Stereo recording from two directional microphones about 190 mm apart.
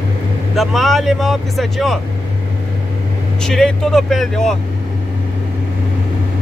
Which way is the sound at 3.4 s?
5° left (ahead or behind).